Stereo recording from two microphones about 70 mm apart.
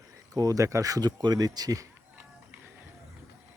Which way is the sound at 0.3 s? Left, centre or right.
Right.